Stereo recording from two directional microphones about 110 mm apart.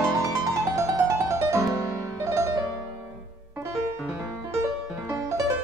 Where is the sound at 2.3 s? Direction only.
25° right (ahead or behind).